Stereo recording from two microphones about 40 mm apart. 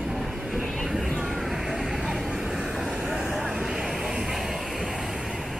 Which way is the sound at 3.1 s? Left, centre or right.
Centre.